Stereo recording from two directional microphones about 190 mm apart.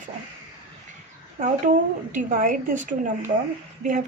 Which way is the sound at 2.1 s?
45° right (ahead or behind).